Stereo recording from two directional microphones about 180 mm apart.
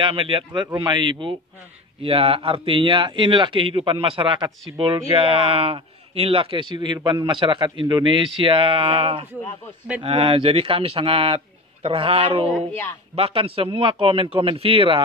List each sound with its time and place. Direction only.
0.0 s a man's voice: 30° right (ahead or behind)